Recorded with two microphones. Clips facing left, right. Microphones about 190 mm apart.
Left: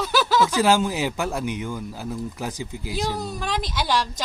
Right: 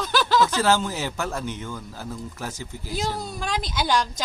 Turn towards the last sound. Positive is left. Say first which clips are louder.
# even
turn(degrees=0)  # may be behind; listen again after turning